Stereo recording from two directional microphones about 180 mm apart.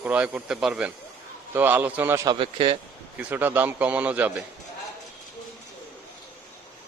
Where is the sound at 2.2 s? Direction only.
25° right (ahead or behind).